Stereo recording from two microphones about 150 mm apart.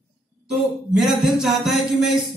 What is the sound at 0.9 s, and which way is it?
A man's voice, centre (ahead or behind).